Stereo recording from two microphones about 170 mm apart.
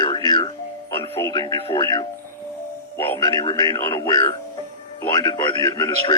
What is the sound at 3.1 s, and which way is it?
Speech, 25° left (ahead or behind).